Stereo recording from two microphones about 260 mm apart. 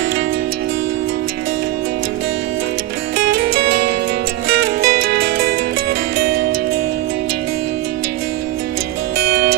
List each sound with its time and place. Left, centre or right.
3.2 s music: right
9.1 s music: right